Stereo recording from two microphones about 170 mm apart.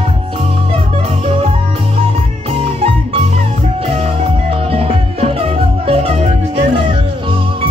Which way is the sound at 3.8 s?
35° right (ahead or behind).